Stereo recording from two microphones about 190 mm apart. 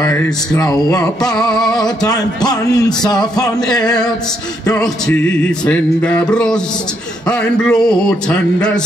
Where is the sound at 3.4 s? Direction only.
5° left (ahead or behind).